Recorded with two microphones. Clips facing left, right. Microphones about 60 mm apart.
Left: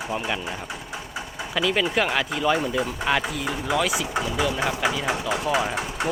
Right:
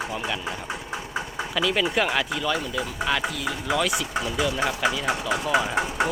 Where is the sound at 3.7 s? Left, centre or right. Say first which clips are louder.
Left 1 dB; centre.